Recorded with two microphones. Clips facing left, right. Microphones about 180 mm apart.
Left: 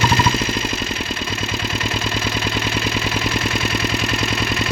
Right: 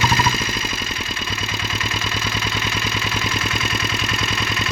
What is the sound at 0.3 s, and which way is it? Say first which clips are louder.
Vehicle: left 5 dB; 65° left (ahead or behind).